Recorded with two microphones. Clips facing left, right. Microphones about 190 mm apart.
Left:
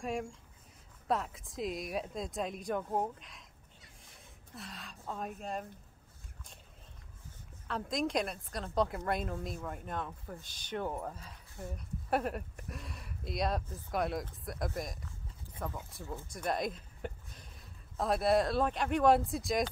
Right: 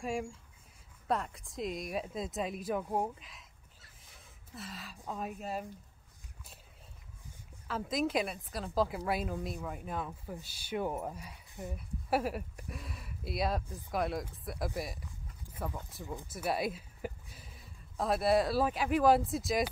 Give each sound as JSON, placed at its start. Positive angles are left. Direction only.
{"t": 0.0, "sound": "speech", "side_deg": 0}
{"t": 4.0, "sound": "gasp", "side_deg": 0}
{"t": 5.1, "sound": "speech", "side_deg": -5}
{"t": 7.6, "sound": "a woman's voice", "side_deg": -5}